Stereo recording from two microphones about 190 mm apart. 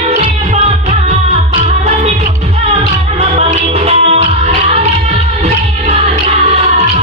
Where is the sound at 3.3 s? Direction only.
30° right (ahead or behind).